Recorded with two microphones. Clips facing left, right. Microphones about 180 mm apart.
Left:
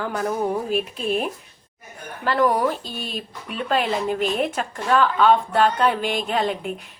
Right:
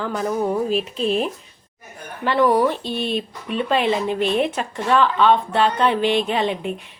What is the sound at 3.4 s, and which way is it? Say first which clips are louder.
Speech: right 3 dB; 5° left (ahead or behind).